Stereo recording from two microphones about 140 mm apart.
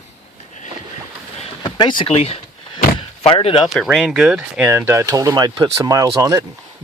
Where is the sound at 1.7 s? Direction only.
30° left (ahead or behind).